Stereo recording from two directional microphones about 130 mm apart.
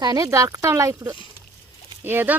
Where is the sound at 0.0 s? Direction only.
30° right (ahead or behind).